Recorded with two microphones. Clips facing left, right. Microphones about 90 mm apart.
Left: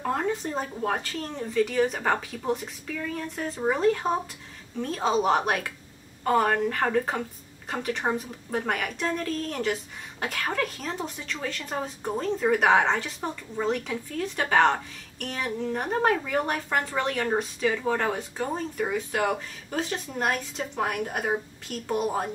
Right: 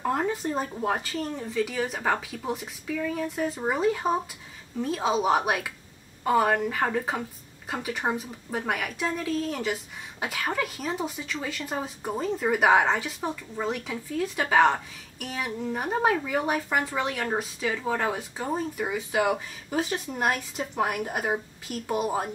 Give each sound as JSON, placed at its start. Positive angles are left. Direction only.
{"t": 0.0, "sound": "speech", "side_deg": -5}